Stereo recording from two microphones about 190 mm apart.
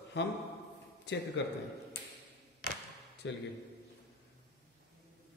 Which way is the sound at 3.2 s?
70° left (ahead or behind).